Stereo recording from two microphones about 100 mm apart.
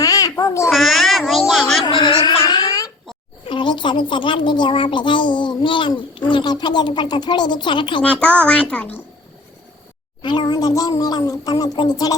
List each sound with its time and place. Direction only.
0.0 s babbling: 35° left (ahead or behind)
0.7 s a sound: centre (ahead or behind)
1.8 s a sound: 50° left (ahead or behind)
2.5 s baby cry: 40° left (ahead or behind)
3.5 s a child's voice: 55° left (ahead or behind)
8.0 s a child's voice: 15° left (ahead or behind)
10.2 s a child's voice: 50° left (ahead or behind)
10.7 s speech: 40° left (ahead or behind)